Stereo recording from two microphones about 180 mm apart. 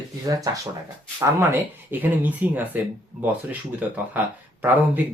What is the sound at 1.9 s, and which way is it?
Speech, 10° right (ahead or behind).